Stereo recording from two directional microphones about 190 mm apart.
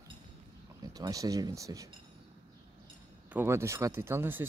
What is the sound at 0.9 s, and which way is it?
Speech, 20° right (ahead or behind).